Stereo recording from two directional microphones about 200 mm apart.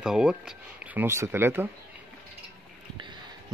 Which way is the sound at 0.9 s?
15° right (ahead or behind).